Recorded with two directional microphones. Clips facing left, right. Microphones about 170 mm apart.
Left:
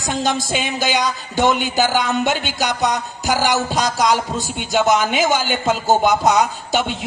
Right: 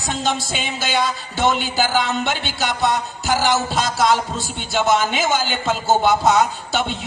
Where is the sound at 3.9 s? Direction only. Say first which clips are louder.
Right 2 dB; 15° left (ahead or behind).